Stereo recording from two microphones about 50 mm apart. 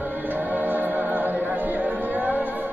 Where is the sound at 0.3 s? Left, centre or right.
Right.